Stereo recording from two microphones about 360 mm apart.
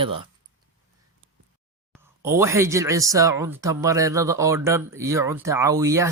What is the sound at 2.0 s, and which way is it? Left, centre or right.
Speech, centre.